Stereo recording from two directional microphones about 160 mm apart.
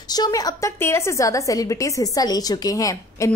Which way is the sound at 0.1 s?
25° left (ahead or behind).